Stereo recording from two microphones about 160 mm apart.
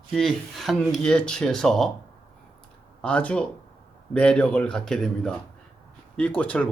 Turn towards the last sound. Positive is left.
turn(degrees=10)  # may be behind; listen again after turning